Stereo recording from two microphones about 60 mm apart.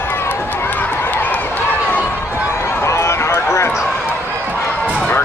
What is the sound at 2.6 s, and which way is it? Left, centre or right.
Run, left.